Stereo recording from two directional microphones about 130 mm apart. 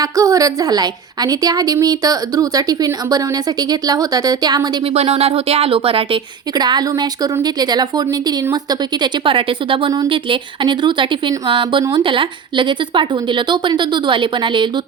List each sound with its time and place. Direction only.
0.0 s a woman's voice: 25° right (ahead or behind)
4.9 s a sound: 50° right (ahead or behind)
6.6 s speech: 35° right (ahead or behind)